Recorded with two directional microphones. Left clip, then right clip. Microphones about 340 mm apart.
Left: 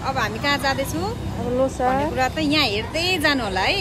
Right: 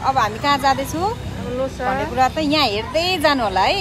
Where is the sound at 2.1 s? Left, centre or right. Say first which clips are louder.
Right 3 dB; centre.